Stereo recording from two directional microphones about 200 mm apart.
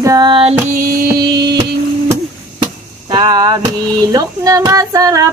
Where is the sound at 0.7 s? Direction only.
45° right (ahead or behind).